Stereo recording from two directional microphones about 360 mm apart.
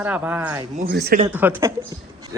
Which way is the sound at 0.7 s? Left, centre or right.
Right.